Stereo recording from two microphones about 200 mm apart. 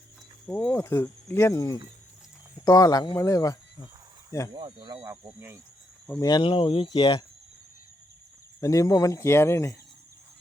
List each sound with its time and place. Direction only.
0.4 s speech: 10° left (ahead or behind)
4.5 s speech: 20° right (ahead or behind)
6.1 s speech: 20° left (ahead or behind)
8.6 s speech: 15° left (ahead or behind)